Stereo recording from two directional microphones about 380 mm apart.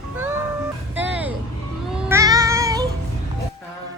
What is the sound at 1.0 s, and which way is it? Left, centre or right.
Music, centre.